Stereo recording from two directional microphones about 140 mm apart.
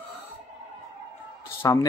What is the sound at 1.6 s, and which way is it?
Speech, 20° left (ahead or behind).